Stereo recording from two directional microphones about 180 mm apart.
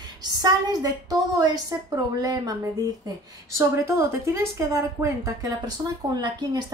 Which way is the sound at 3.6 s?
15° right (ahead or behind).